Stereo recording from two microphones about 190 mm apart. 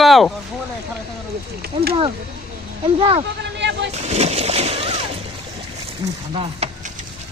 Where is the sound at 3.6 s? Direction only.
65° right (ahead or behind).